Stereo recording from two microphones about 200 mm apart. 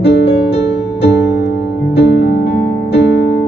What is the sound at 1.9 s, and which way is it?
Music, 60° left (ahead or behind).